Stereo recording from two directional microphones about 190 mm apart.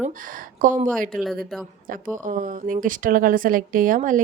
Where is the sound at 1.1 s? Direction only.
Centre (ahead or behind).